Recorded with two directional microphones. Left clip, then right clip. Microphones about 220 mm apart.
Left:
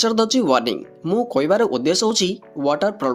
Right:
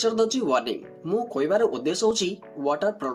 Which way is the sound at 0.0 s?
40° left (ahead or behind).